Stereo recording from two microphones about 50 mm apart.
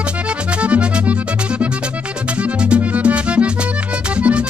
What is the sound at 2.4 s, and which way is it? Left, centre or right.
Music, right.